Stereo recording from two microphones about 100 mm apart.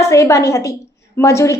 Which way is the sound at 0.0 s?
30° left (ahead or behind).